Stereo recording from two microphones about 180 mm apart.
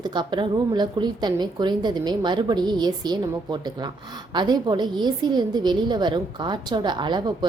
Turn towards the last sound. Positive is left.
turn(degrees=-25)  # may be behind; listen again after turning